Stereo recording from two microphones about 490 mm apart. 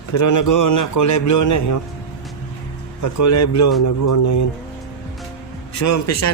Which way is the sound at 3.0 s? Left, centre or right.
Left.